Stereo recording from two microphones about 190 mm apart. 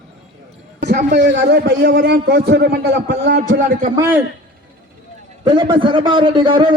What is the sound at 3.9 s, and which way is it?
Speech, 10° right (ahead or behind).